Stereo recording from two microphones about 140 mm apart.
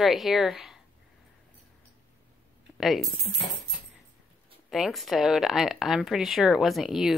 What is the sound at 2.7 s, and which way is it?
Coin, centre (ahead or behind).